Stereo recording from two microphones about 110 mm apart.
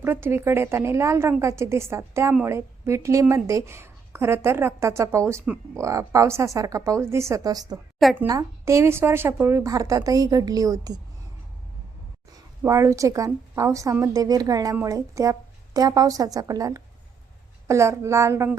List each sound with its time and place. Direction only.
0.0 s a woman's voice: 20° right (ahead or behind)
12.6 s a woman's voice: 30° right (ahead or behind)